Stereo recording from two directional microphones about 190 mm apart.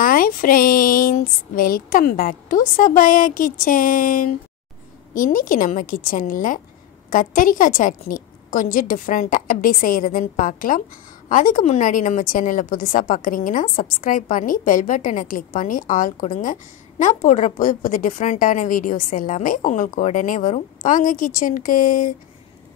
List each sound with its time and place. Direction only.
0.0 s a woman's voice: 45° left (ahead or behind)